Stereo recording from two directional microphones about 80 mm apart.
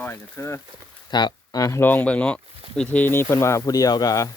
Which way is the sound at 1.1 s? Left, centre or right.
Left.